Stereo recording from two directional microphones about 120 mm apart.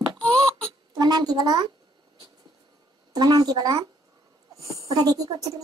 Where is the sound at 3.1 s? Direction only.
35° right (ahead or behind).